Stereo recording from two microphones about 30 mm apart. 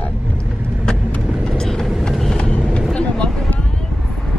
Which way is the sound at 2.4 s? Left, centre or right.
Left.